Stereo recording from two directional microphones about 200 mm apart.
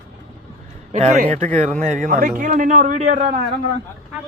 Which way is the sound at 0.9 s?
40° right (ahead or behind).